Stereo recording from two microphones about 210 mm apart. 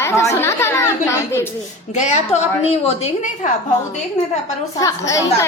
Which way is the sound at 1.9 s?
35° left (ahead or behind).